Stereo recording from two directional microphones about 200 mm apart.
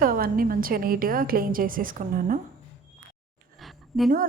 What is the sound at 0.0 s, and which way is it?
A woman's voice, 45° right (ahead or behind).